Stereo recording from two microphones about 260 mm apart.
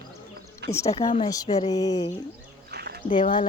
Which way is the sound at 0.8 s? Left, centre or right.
Left.